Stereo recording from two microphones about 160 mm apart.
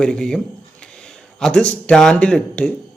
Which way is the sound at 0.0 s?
5° left (ahead or behind).